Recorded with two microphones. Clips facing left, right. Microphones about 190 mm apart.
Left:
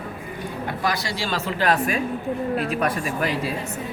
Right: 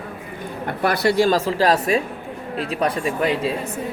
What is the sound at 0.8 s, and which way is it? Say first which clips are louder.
Speech: right 11 dB; 60° right (ahead or behind).